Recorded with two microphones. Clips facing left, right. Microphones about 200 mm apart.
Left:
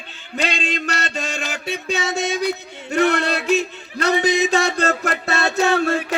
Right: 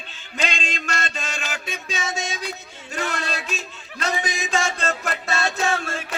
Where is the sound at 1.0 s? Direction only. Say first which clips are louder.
Left 5 dB; 40° left (ahead or behind).